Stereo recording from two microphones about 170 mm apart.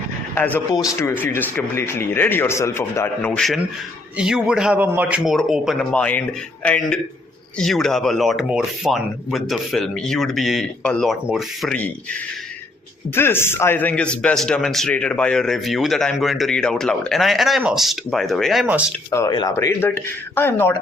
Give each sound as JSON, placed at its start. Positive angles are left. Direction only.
{"t": 0.3, "sound": "a man's voice", "side_deg": 10}
{"t": 3.3, "sound": "a man's voice", "side_deg": 0}
{"t": 13.1, "sound": "a man's voice", "side_deg": 15}
{"t": 19.1, "sound": "speech", "side_deg": 20}